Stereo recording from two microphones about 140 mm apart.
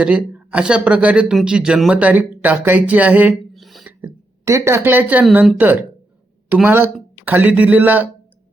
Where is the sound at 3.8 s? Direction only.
15° right (ahead or behind).